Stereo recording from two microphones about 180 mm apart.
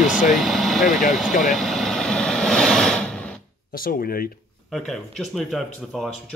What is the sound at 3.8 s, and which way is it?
Speech, 55° left (ahead or behind).